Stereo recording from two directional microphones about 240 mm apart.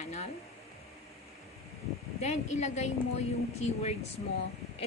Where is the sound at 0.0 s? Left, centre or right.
Left.